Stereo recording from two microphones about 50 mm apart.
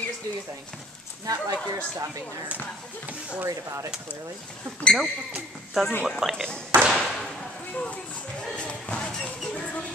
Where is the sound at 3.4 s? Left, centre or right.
Right.